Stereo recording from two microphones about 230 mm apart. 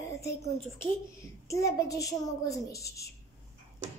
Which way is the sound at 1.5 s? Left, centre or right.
Centre.